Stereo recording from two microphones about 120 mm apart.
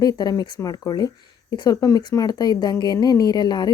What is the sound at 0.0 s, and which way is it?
Speech, 35° left (ahead or behind).